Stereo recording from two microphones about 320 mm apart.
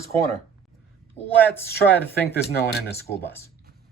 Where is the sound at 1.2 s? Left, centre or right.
Centre.